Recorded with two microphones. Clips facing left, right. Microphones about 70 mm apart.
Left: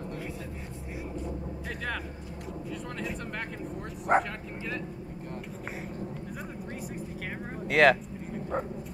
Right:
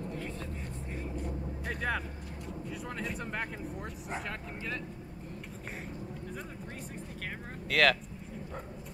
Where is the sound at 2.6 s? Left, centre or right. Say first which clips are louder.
Left 2 dB; centre.